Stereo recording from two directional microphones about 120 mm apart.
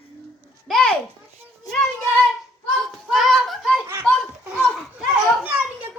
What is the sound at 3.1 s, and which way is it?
Speech, centre (ahead or behind).